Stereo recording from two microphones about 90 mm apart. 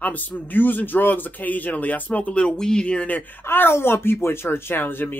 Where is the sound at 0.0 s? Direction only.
20° left (ahead or behind).